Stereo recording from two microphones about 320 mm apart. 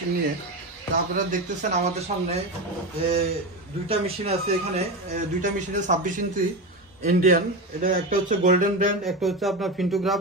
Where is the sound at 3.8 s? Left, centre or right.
Centre.